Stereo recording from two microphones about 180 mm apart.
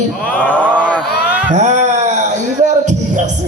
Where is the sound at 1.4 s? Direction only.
40° right (ahead or behind).